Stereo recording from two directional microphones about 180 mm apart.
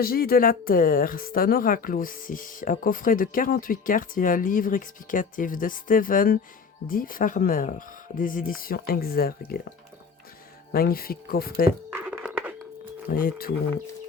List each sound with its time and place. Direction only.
0.0 s speech: 55° left (ahead or behind)
10.7 s speech: 55° left (ahead or behind)
11.9 s a sound: 10° right (ahead or behind)
13.1 s speech: 55° left (ahead or behind)